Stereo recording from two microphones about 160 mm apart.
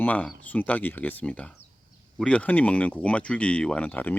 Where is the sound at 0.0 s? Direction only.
10° left (ahead or behind).